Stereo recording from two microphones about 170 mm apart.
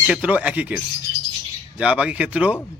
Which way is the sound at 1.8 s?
5° right (ahead or behind).